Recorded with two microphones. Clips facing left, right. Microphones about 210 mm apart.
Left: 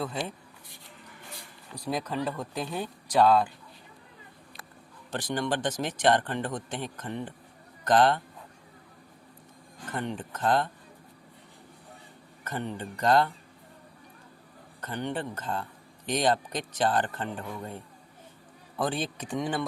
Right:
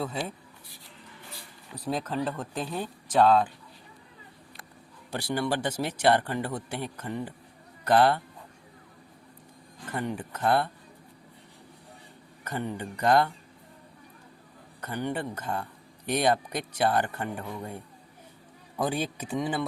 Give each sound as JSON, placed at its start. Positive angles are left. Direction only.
{"t": 0.0, "sound": "speech", "side_deg": -5}
{"t": 1.8, "sound": "speech", "side_deg": 0}
{"t": 5.1, "sound": "speech", "side_deg": -10}
{"t": 9.9, "sound": "speech", "side_deg": -10}
{"t": 12.5, "sound": "speech", "side_deg": -10}
{"t": 14.8, "sound": "speech", "side_deg": -10}